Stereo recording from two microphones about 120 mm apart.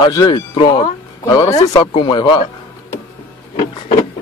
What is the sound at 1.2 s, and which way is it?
Speech, 30° left (ahead or behind).